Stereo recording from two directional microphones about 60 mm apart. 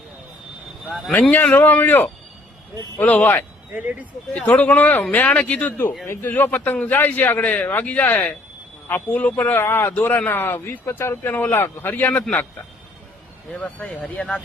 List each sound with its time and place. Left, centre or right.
0.9 s speech: centre
1.3 s a man's voice: left
9.9 s speech: left
11.2 s speech: left
11.5 s speech: left
13.5 s a man's voice: left